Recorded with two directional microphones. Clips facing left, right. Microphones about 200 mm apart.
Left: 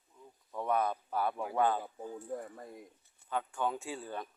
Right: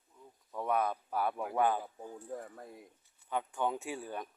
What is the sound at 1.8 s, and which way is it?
Speech, centre (ahead or behind).